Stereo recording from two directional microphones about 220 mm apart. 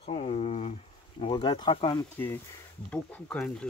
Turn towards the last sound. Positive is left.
turn(degrees=5)  # may be behind; listen again after turning